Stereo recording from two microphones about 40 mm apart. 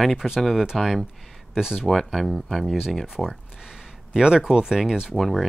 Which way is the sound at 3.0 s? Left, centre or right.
Centre.